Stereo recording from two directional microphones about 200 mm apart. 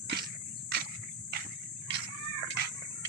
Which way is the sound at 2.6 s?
55° right (ahead or behind).